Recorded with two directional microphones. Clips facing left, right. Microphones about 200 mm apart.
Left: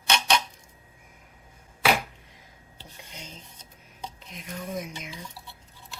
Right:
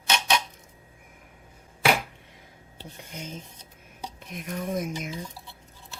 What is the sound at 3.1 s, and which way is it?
Speech, 50° right (ahead or behind).